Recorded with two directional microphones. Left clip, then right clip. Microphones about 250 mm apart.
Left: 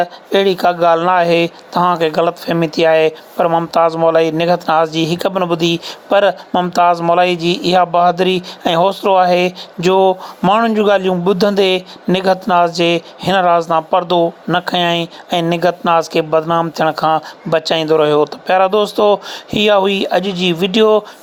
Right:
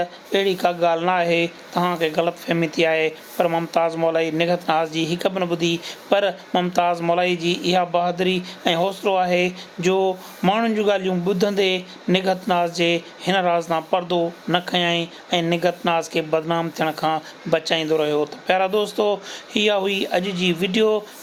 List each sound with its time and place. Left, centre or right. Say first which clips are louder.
0.0 s speech: left 8 dB; left